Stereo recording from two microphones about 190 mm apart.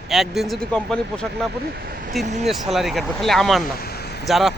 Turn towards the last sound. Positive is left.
turn(degrees=0)  # may be behind; listen again after turning